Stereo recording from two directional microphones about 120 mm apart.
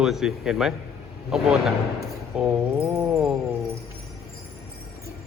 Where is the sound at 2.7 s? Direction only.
25° right (ahead or behind).